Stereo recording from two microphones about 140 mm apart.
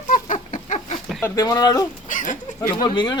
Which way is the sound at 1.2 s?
25° left (ahead or behind).